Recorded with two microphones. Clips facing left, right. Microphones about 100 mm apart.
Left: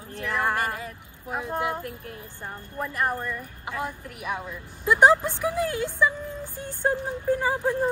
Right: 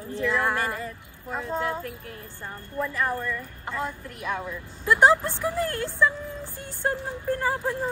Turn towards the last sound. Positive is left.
turn(degrees=15)  # may be behind; listen again after turning